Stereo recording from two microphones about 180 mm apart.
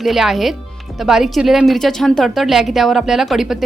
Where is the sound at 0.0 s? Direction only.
Centre (ahead or behind).